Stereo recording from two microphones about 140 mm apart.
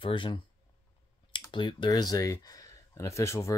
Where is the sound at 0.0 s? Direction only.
35° left (ahead or behind).